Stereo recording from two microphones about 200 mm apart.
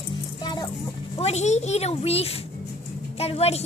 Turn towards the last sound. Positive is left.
turn(degrees=30)  # may be behind; listen again after turning